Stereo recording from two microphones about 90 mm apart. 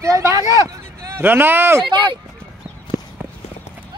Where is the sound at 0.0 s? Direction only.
35° right (ahead or behind).